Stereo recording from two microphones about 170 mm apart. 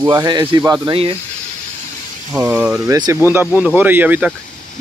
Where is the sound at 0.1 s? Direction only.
25° right (ahead or behind).